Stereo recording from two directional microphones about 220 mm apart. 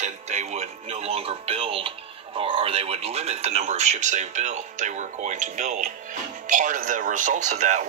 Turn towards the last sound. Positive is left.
turn(degrees=-35)  # may be behind; listen again after turning